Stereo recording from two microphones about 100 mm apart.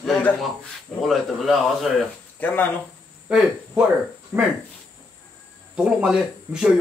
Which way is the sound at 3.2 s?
10° right (ahead or behind).